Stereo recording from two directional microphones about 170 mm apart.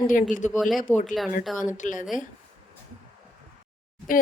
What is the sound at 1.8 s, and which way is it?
Speech, 50° left (ahead or behind).